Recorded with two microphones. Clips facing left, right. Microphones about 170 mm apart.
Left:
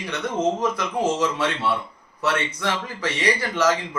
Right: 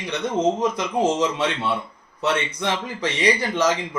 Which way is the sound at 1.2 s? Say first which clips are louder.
Right 1 dB; 20° right (ahead or behind).